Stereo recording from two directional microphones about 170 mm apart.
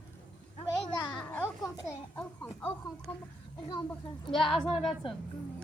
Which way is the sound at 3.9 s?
Centre (ahead or behind).